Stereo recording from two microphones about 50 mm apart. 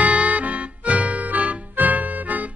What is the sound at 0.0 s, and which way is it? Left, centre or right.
Music, right.